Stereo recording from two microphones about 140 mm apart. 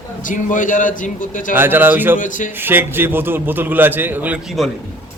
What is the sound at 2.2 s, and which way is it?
Speech, 70° left (ahead or behind).